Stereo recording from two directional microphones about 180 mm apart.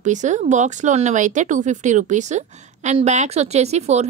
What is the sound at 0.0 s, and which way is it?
Speech, 40° right (ahead or behind).